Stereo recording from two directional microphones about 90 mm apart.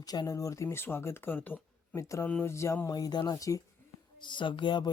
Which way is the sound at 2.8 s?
45° left (ahead or behind).